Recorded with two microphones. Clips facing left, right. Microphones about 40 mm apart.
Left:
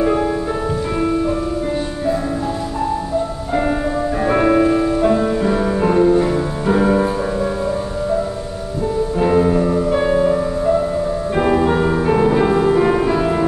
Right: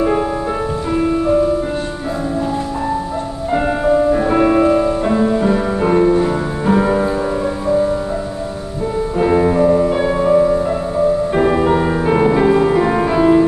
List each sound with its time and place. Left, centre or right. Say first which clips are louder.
3.5 s music: right 4 dB; centre
9.2 s music: right 2 dB; centre
9.9 s music: even; centre
10.3 s music: right 3 dB; centre